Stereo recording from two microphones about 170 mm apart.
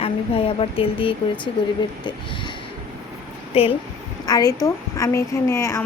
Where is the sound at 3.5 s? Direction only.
35° left (ahead or behind).